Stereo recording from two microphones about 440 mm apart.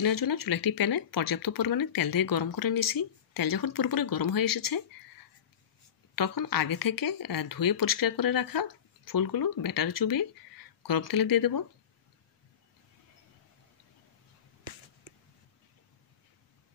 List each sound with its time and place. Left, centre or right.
0.0 s speech: left
6.1 s speech: left